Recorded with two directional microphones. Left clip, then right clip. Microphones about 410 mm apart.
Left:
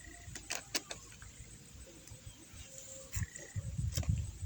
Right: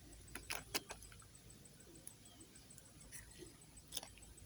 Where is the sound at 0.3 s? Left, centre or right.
Right.